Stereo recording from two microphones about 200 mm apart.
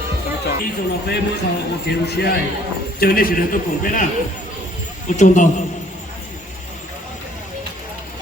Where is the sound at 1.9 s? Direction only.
55° left (ahead or behind).